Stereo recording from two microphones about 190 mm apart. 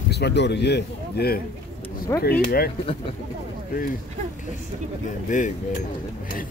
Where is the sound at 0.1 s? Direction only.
60° left (ahead or behind).